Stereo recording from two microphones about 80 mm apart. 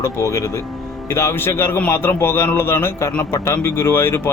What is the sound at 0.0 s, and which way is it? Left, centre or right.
A man's voice, left.